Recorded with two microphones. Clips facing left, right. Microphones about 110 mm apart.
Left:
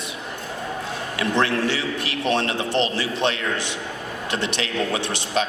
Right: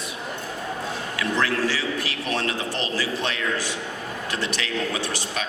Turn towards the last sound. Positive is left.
turn(degrees=25)  # may be behind; listen again after turning